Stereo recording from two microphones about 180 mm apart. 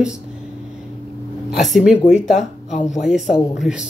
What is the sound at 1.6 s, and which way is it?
Speech, centre (ahead or behind).